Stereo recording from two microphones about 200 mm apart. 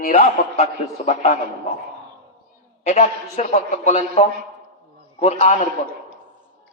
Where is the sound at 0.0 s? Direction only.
45° left (ahead or behind).